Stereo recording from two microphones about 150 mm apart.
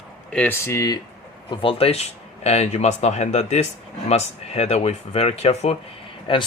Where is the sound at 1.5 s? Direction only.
35° left (ahead or behind).